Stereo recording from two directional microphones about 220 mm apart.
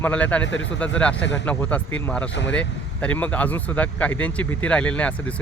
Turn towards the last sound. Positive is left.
turn(degrees=5)  # may be behind; listen again after turning